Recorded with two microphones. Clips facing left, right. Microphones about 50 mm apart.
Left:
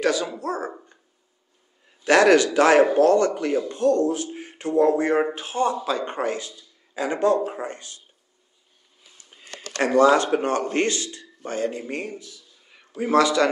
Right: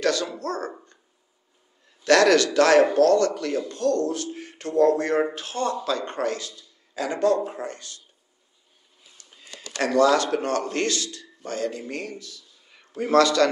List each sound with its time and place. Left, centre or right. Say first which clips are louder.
0.0 s a man's voice: left 1 dB; centre
9.4 s a sound: left 3 dB; left
9.8 s a man's voice: left 2 dB; left